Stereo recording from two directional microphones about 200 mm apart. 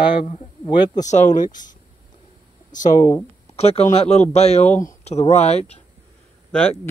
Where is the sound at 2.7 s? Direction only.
40° left (ahead or behind).